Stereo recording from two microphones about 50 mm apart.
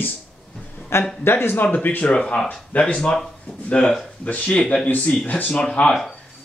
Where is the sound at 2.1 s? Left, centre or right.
Centre.